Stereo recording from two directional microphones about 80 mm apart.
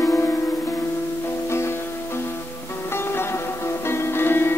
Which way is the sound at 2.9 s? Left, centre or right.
Left.